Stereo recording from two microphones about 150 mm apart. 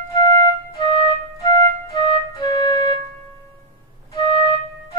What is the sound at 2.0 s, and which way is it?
Music, 30° left (ahead or behind).